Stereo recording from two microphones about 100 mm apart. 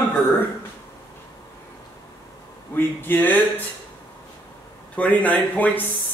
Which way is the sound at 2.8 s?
20° left (ahead or behind).